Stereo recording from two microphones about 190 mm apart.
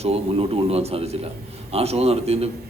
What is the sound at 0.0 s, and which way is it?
A man's voice, 30° right (ahead or behind).